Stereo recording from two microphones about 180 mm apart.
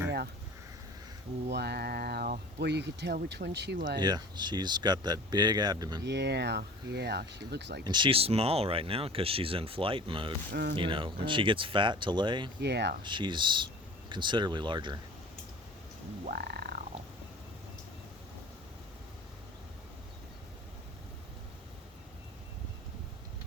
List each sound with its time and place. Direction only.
1.5 s speech: 65° right (ahead or behind)
4.0 s speech: 25° right (ahead or behind)
6.1 s speech: 70° right (ahead or behind)
7.9 s speech: 25° right (ahead or behind)
10.5 s speech: 65° right (ahead or behind)
10.8 s speech: 30° right (ahead or behind)
12.5 s speech: 70° right (ahead or behind)
13.0 s speech: 25° right (ahead or behind)
16.2 s frog: 60° right (ahead or behind)